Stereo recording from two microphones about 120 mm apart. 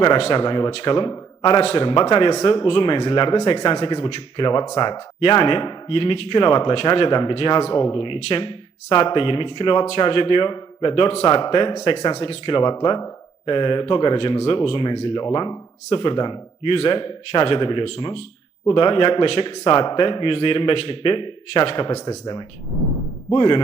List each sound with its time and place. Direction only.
0.2 s a man's voice: 50° left (ahead or behind)
1.6 s speech: 50° left (ahead or behind)
11.3 s speech: 40° left (ahead or behind)
16.7 s speech: 50° left (ahead or behind)